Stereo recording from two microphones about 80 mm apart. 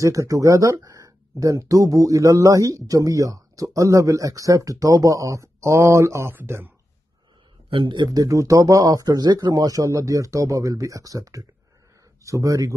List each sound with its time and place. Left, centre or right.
0.0 s speech: right
7.7 s a man's voice: right
8.1 s speech: right
9.6 s speech: right